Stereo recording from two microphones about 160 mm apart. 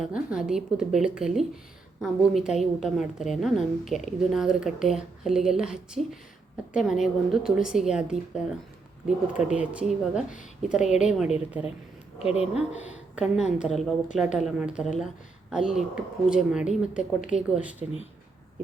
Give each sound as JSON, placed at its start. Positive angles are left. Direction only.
{"t": 0.0, "sound": "a woman's voice", "side_deg": -5}